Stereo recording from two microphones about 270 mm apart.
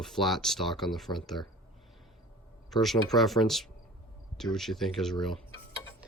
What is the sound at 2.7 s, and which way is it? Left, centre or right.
Speech, centre.